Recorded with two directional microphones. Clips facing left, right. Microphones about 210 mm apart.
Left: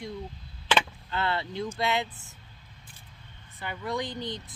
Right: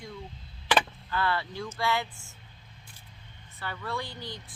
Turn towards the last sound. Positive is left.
turn(degrees=20)  # may be behind; listen again after turning